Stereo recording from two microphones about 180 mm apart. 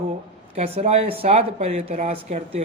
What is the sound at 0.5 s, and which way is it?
Speech, 35° right (ahead or behind).